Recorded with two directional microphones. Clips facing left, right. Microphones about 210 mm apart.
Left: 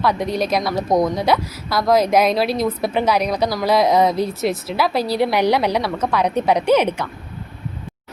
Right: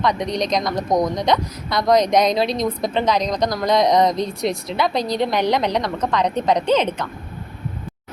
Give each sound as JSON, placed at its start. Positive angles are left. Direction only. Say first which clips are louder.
{"t": 0.0, "sound": "a woman's voice", "louder": "left 1 dB", "side_deg": 5}